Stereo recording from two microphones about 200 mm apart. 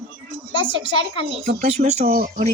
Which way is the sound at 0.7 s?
70° right (ahead or behind).